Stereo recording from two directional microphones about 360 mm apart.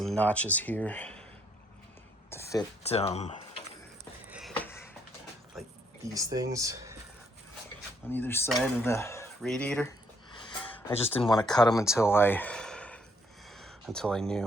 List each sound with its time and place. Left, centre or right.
0.0 s speech: centre
2.3 s speech: centre
4.3 s a sound: centre
5.5 s speech: centre
8.1 s speech: centre
10.5 s music: centre
11.1 s speech: centre
13.5 s a sound: centre